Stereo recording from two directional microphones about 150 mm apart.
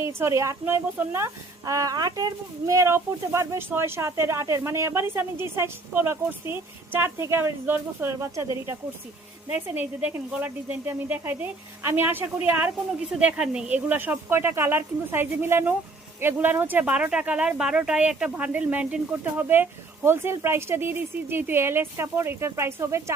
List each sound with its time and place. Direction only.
0.2 s speech: 20° right (ahead or behind)